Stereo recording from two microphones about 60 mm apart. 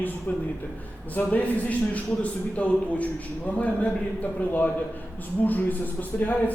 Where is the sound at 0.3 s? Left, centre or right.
Left.